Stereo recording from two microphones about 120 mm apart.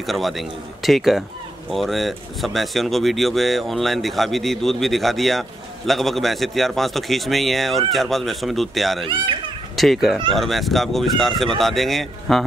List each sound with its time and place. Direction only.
0.0 s speech: centre (ahead or behind)
9.0 s a child's voice: 45° right (ahead or behind)
9.8 s speech: centre (ahead or behind)